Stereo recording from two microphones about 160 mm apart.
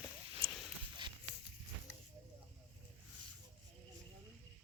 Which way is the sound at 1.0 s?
30° right (ahead or behind).